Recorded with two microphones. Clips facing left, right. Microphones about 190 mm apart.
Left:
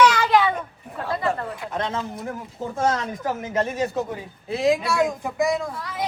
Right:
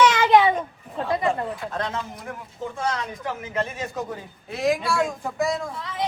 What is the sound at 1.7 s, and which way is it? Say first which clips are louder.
Speech: left 2 dB; 25° left (ahead or behind).